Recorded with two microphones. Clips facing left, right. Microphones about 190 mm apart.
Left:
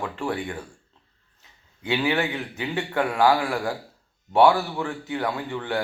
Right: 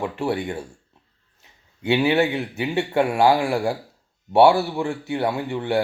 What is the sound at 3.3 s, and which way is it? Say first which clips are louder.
Speech: right 3 dB; 25° right (ahead or behind).